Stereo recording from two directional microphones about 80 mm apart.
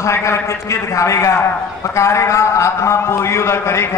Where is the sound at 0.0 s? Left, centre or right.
Left.